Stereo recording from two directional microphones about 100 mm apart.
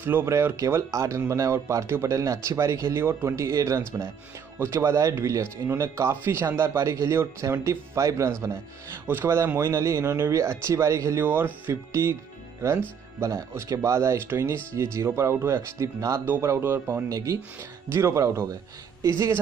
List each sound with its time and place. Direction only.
0.0 s speech: 25° right (ahead or behind)
8.9 s speech: 20° right (ahead or behind)
11.2 s speech: 20° right (ahead or behind)
13.2 s speech: 35° right (ahead or behind)